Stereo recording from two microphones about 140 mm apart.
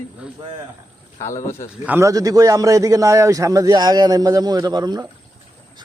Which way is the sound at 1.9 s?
20° right (ahead or behind).